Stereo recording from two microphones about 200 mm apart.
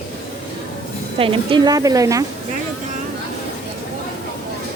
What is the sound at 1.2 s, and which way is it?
A woman's voice, 25° right (ahead or behind).